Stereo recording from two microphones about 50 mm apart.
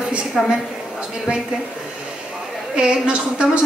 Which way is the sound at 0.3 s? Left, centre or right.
Centre.